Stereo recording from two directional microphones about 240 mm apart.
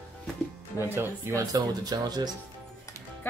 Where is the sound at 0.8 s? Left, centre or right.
Centre.